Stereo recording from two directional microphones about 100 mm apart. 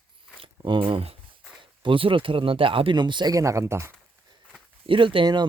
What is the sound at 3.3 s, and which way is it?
Speech, 30° right (ahead or behind).